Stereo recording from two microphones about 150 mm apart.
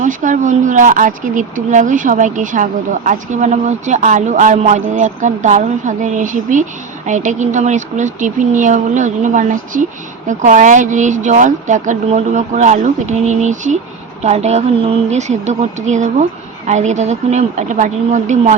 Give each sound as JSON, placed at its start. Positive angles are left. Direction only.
{"t": 0.0, "sound": "speech", "side_deg": -60}